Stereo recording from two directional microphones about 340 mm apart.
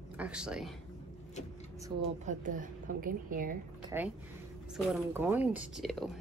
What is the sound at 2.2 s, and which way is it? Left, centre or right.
A woman's voice, right.